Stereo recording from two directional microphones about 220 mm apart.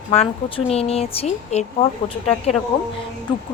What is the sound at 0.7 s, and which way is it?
Speech, 25° left (ahead or behind).